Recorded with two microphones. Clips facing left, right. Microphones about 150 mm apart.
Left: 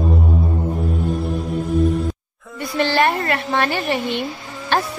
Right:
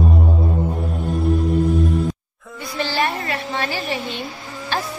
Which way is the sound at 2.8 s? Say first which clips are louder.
Left 5 dB; 60° left (ahead or behind).